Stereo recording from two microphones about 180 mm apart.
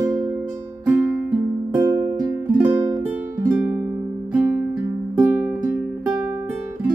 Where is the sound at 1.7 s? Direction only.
25° right (ahead or behind).